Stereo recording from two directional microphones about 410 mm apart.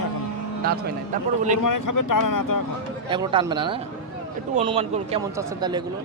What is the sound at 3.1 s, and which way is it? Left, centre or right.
A man's voice, centre.